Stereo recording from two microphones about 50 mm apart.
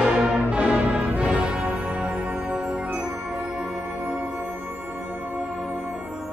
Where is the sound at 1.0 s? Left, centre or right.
Right.